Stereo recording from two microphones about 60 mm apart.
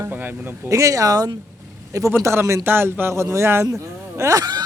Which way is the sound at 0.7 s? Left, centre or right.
Right.